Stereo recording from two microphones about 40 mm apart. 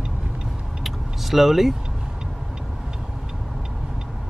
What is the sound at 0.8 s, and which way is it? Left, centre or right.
Vehicle, centre.